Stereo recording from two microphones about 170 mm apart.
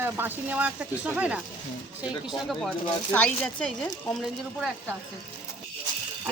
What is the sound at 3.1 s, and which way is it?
Speech, 10° left (ahead or behind).